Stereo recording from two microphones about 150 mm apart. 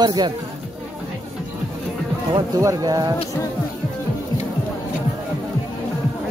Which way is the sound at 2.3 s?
25° right (ahead or behind).